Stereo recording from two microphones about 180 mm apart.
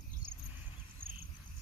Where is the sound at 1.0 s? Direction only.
55° right (ahead or behind).